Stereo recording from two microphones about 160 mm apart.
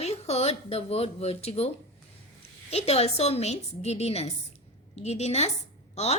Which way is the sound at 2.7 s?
40° left (ahead or behind).